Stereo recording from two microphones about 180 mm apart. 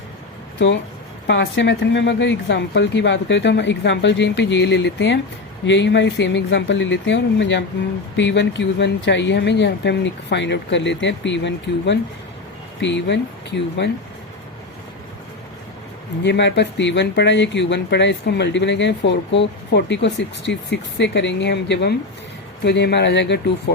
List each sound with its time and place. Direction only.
1.3 s speech: 80° left
16.2 s speech: 75° left (ahead or behind)